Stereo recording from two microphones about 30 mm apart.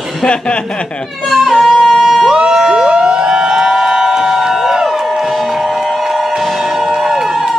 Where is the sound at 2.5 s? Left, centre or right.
Centre.